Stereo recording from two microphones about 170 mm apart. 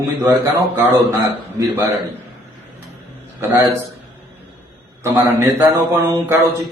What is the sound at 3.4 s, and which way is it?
Speech, 15° right (ahead or behind).